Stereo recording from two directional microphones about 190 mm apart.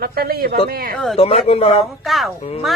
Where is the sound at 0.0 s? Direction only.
55° right (ahead or behind).